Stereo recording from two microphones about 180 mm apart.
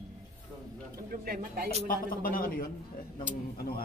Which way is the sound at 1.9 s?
50° left (ahead or behind).